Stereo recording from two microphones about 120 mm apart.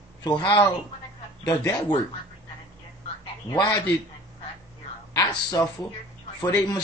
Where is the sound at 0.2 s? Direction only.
40° left (ahead or behind).